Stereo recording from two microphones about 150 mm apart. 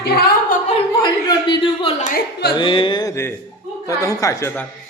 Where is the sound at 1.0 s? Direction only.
30° left (ahead or behind).